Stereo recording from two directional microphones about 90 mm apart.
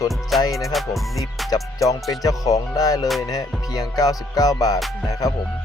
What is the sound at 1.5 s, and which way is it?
Speech, 40° left (ahead or behind).